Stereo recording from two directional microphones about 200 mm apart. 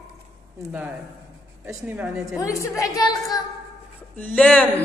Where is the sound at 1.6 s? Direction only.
10° right (ahead or behind).